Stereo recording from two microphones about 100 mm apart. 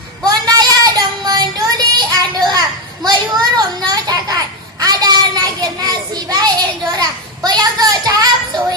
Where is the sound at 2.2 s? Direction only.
45° right (ahead or behind).